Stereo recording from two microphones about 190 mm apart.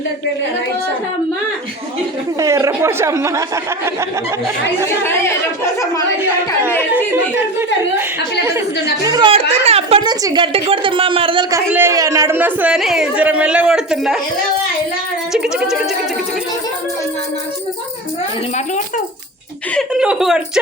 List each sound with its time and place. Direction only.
2.4 s speech: 15° right (ahead or behind)
6.1 s speech: 10° right (ahead or behind)
9.0 s a woman's voice: 25° right (ahead or behind)
11.7 s speech: 15° right (ahead or behind)
15.3 s speech: 5° right (ahead or behind)
19.7 s chuckle: 5° right (ahead or behind)